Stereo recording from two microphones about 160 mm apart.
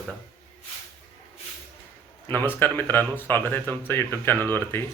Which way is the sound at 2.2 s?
10° left (ahead or behind).